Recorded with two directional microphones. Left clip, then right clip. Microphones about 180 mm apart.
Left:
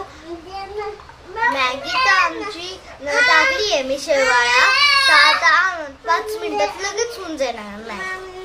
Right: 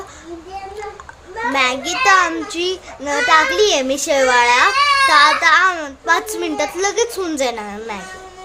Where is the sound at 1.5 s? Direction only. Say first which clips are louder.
Right 2 dB; 60° right (ahead or behind).